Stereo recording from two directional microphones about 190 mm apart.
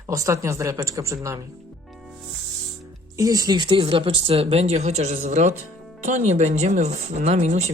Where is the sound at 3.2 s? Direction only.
20° right (ahead or behind).